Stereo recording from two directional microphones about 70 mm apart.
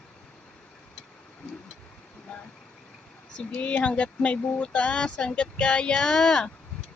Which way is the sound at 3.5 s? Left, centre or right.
Centre.